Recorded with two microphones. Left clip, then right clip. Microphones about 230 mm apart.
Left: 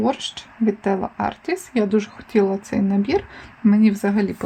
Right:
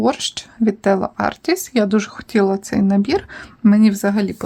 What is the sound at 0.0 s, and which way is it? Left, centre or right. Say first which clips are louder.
Speech: right 4 dB; right.